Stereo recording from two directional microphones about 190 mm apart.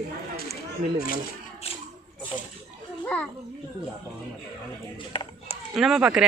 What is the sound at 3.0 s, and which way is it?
Speech, 10° left (ahead or behind).